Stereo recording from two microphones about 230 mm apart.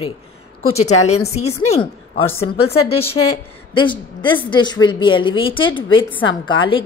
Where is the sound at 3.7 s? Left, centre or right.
Left.